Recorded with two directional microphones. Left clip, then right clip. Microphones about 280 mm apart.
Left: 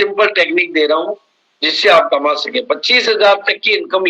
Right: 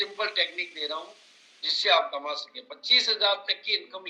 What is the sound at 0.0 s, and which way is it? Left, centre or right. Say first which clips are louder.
A man's voice: left 15 dB; left.